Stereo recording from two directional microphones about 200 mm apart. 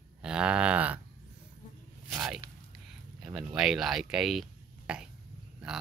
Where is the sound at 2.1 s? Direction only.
10° right (ahead or behind).